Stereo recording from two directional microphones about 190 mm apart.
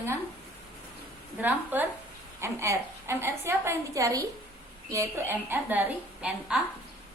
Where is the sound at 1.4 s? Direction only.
10° right (ahead or behind).